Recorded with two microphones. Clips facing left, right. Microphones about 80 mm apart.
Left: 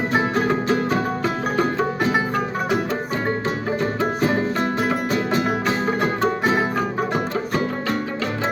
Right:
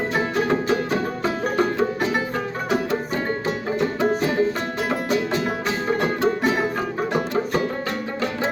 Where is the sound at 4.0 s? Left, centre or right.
Left.